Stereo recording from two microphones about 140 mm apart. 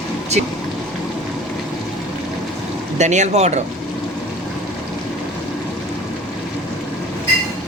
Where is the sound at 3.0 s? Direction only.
55° right (ahead or behind).